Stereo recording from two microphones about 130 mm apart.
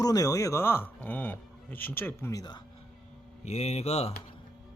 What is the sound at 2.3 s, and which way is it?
Speech, 30° left (ahead or behind).